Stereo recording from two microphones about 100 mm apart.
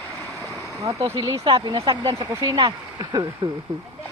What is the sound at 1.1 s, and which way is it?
Speech, 45° right (ahead or behind).